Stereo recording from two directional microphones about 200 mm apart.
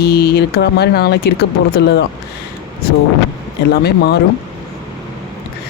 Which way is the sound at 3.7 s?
55° left (ahead or behind).